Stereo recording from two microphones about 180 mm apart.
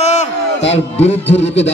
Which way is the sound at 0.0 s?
40° left (ahead or behind).